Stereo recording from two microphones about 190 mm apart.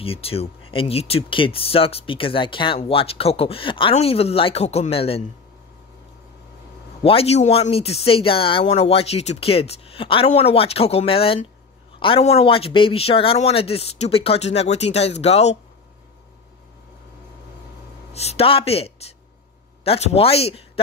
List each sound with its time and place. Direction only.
0.0 s speech: 30° left (ahead or behind)
7.0 s speech: 30° left (ahead or behind)
18.1 s speech: 35° left (ahead or behind)